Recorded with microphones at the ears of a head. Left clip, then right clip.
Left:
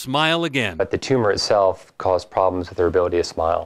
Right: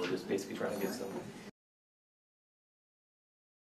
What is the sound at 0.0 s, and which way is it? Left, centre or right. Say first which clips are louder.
Speech: left 17 dB; left.